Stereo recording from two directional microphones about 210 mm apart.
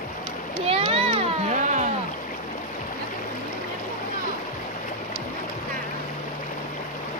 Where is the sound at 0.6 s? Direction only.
30° right (ahead or behind).